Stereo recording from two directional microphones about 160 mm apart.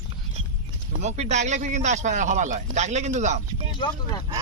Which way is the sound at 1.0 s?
45° right (ahead or behind).